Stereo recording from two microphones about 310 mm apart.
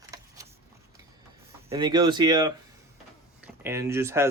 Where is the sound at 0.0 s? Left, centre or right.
Centre.